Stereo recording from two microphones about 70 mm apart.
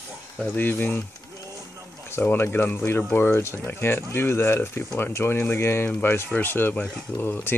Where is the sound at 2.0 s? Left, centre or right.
Left.